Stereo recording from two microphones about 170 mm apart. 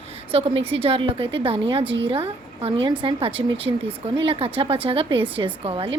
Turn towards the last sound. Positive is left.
turn(degrees=-30)  # may be behind; listen again after turning